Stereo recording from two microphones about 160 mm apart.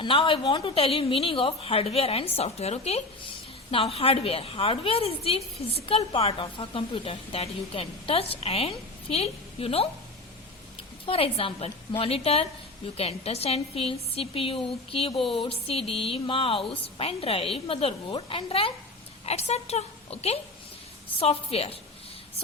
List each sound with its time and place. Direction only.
0.0 s a woman's voice: 30° left (ahead or behind)
11.0 s a woman's voice: 35° left (ahead or behind)
15.2 s speech: centre (ahead or behind)
15.4 s a woman's voice: 35° left (ahead or behind)